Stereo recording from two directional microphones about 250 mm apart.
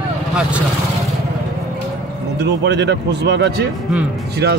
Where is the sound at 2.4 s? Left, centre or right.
Right.